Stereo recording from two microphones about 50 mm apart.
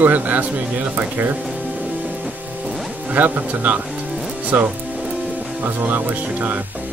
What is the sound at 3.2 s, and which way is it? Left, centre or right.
Speech, right.